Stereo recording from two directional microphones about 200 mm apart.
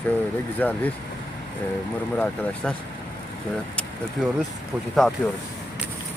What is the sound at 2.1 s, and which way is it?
Speech, 5° left (ahead or behind).